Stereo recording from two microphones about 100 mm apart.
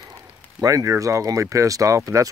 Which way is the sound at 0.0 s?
35° right (ahead or behind).